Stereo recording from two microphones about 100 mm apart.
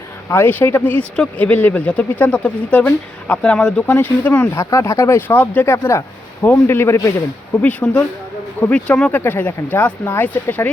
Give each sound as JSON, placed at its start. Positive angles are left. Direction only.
{"t": 0.3, "sound": "speech", "side_deg": 20}
{"t": 4.5, "sound": "speech", "side_deg": 30}
{"t": 5.7, "sound": "speech", "side_deg": 30}
{"t": 7.6, "sound": "speech", "side_deg": 15}